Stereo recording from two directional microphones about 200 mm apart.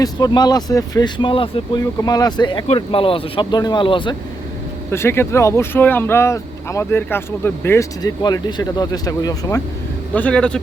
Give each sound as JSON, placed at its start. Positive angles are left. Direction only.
{"t": 0.0, "sound": "speech", "side_deg": 20}
{"t": 4.9, "sound": "speech", "side_deg": 10}
{"t": 10.2, "sound": "a man's voice", "side_deg": 5}